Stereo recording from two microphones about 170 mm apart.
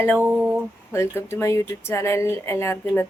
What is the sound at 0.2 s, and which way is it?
Speech, 10° right (ahead or behind).